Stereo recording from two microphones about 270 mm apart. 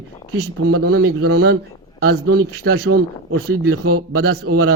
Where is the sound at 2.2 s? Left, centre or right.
Right.